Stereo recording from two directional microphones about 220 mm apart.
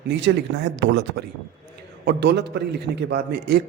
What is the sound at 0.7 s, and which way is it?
A man's voice, 55° right (ahead or behind).